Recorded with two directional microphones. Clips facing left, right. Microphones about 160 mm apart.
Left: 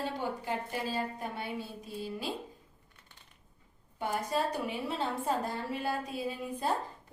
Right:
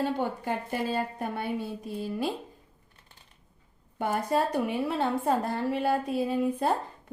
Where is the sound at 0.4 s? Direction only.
55° right (ahead or behind).